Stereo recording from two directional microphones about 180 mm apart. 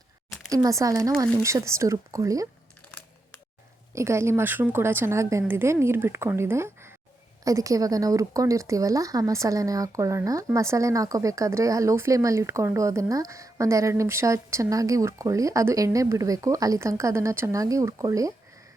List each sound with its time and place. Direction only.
0.3 s a sound: 5° left (ahead or behind)
0.6 s speech: 20° right (ahead or behind)
3.9 s speech: 15° right (ahead or behind)